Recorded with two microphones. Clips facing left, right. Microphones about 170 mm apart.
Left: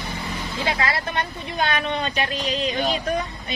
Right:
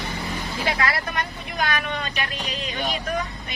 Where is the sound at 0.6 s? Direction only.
25° left (ahead or behind).